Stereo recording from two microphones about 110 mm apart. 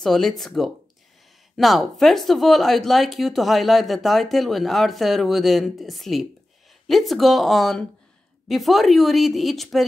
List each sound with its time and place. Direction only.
0.0 s speech: 5° left (ahead or behind)